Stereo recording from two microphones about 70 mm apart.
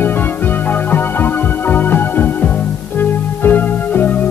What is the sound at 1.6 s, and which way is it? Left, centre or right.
Music, left.